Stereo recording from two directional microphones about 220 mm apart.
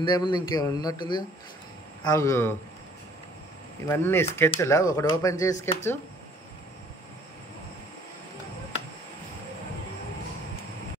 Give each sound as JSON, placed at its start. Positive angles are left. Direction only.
{"t": 0.0, "sound": "a man's voice", "side_deg": 20}
{"t": 3.8, "sound": "speech", "side_deg": 10}